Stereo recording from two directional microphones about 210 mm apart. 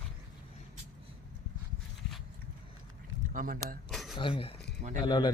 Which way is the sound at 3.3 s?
40° right (ahead or behind).